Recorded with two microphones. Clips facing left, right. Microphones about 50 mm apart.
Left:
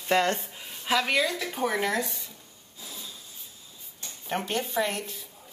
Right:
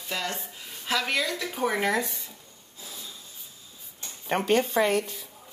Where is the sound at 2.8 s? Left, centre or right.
Centre.